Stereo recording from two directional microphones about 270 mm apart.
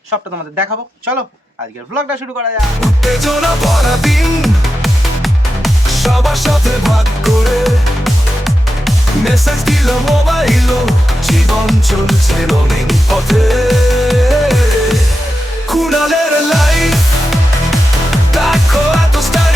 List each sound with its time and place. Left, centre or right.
2.8 s music: centre